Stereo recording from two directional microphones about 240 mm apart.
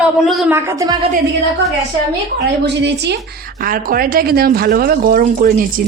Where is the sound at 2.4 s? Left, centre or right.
Right.